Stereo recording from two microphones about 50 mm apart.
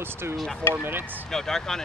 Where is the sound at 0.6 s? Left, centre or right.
Left.